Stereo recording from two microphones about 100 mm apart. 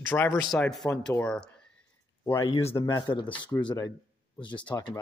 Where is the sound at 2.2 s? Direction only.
30° left (ahead or behind).